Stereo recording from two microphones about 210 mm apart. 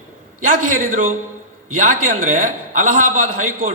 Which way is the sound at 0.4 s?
40° right (ahead or behind).